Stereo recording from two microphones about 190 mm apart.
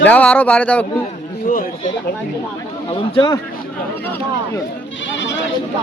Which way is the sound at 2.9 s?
25° left (ahead or behind).